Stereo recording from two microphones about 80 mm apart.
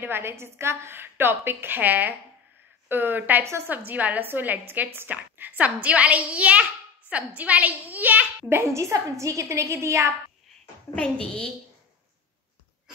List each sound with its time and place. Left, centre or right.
0.0 s a woman's voice: right
11.0 s a woman's voice: centre